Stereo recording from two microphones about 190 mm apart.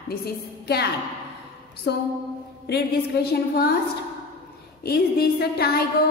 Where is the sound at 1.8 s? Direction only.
60° left (ahead or behind).